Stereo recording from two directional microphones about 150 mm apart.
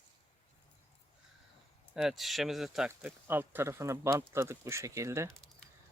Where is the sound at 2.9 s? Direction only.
15° right (ahead or behind).